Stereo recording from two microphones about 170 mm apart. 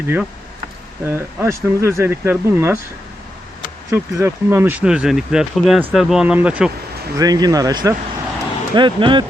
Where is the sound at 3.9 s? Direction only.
15° right (ahead or behind).